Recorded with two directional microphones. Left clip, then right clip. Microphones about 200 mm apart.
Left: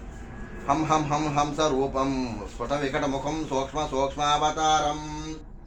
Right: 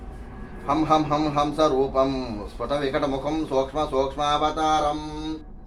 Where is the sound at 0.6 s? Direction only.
5° left (ahead or behind).